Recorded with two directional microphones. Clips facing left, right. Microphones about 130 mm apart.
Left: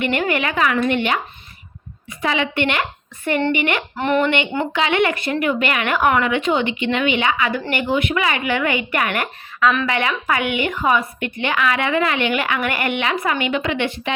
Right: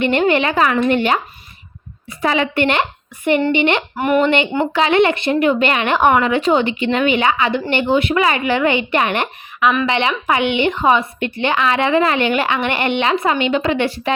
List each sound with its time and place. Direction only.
0.0 s a woman's voice: 30° right (ahead or behind)
3.5 s a woman's voice: 25° right (ahead or behind)
3.9 s speech: 10° right (ahead or behind)
4.2 s a woman's voice: 30° right (ahead or behind)